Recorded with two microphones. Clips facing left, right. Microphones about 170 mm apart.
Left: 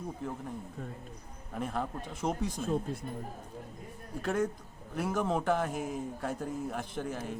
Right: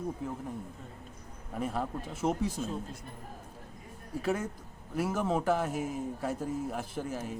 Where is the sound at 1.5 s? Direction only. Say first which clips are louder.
Right 1 dB; 5° right (ahead or behind).